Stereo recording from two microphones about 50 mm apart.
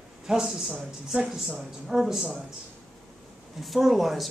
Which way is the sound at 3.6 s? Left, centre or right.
Centre.